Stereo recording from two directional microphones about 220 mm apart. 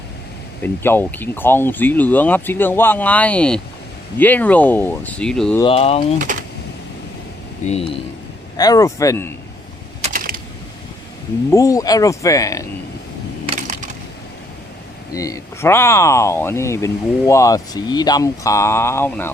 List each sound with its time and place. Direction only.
0.6 s speech: 10° left (ahead or behind)
5.5 s speech: 25° left (ahead or behind)
7.7 s speech: 25° left (ahead or behind)
10.0 s typing: 40° right (ahead or behind)
11.5 s speech: 15° left (ahead or behind)
13.4 s coin: 25° right (ahead or behind)
15.1 s speech: 15° left (ahead or behind)